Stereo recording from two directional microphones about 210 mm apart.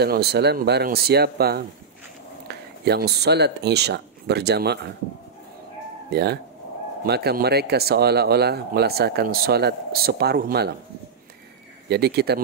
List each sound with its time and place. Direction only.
0.0 s speech: 50° right (ahead or behind)
6.0 s speech: 50° right (ahead or behind)
11.9 s speech: 50° right (ahead or behind)